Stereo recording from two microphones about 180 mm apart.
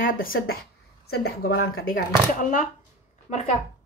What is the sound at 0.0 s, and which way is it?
Speech, 50° left (ahead or behind).